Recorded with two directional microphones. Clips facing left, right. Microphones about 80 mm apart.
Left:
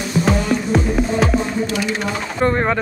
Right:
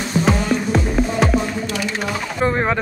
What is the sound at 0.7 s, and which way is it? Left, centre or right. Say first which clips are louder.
Music: left 2 dB; centre.